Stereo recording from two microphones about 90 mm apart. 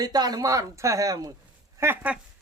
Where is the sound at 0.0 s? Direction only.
50° right (ahead or behind).